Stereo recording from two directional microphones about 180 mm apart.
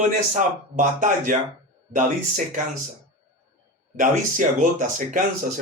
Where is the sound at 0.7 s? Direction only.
45° right (ahead or behind).